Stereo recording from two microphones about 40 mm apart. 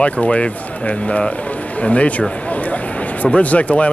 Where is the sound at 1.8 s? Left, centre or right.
Left.